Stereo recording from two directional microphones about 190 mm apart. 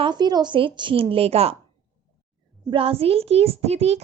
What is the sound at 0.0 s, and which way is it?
A woman's voice, 20° right (ahead or behind).